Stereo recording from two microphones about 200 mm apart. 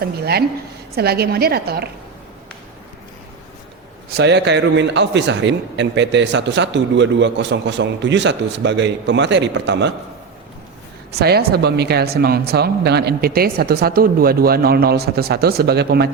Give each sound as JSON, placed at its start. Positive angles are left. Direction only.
{"t": 0.0, "sound": "speech", "side_deg": -50}
{"t": 4.2, "sound": "a man's voice", "side_deg": -60}
{"t": 11.1, "sound": "speech", "side_deg": -50}